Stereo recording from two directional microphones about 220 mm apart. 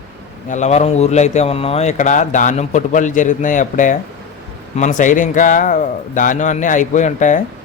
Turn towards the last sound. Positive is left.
turn(degrees=35)  # may be behind; listen again after turning